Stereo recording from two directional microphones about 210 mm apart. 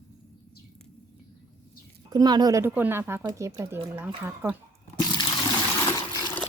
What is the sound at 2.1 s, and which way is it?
Speech, 20° right (ahead or behind).